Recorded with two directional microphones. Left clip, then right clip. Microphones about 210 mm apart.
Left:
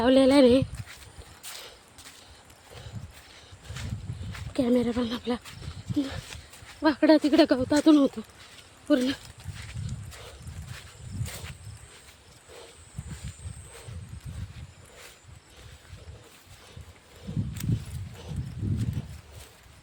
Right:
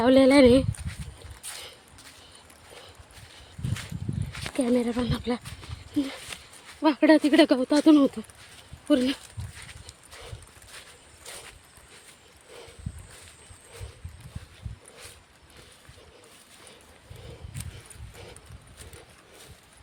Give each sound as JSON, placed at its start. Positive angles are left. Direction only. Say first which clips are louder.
{"t": 0.0, "sound": "speech", "louder": "right 2 dB", "side_deg": -10}
{"t": 4.5, "sound": "speech", "louder": "even", "side_deg": 0}
{"t": 6.3, "sound": "dog", "louder": "right 4 dB", "side_deg": -35}
{"t": 6.8, "sound": "speech", "louder": "right 1 dB", "side_deg": -5}